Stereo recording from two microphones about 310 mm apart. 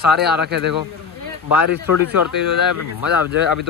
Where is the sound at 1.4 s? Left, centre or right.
Left.